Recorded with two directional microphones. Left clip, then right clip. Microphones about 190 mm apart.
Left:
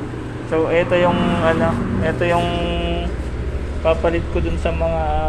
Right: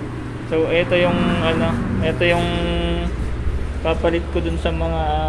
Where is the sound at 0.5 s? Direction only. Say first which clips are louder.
Left 1 dB; 10° right (ahead or behind); by 3.0 s 30° right (ahead or behind).